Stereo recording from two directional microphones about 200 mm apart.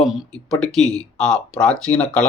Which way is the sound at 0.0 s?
Centre (ahead or behind).